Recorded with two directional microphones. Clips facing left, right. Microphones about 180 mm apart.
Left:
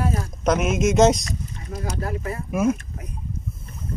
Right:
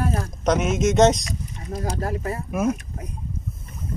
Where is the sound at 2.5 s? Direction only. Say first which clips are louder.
Left 2 dB; 5° left (ahead or behind).